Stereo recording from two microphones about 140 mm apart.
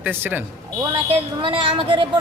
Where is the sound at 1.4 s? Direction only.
40° right (ahead or behind).